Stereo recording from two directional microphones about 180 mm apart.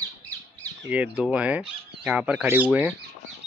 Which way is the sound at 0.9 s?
5° right (ahead or behind).